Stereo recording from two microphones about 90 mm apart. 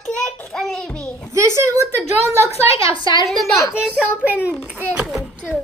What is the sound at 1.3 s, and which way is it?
Speech, 30° right (ahead or behind).